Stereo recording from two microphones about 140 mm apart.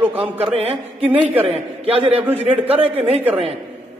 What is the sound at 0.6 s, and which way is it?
Speech, 45° right (ahead or behind).